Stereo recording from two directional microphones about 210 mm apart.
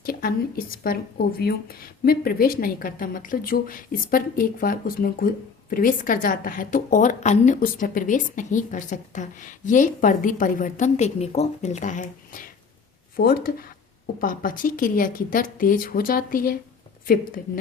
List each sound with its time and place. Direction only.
0.0 s a woman's voice: 45° left (ahead or behind)